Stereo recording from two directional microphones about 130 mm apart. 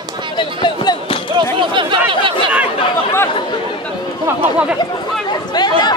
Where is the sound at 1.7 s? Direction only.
40° right (ahead or behind).